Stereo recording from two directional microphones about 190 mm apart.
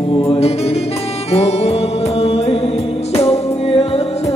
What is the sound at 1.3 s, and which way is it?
Music, 35° left (ahead or behind).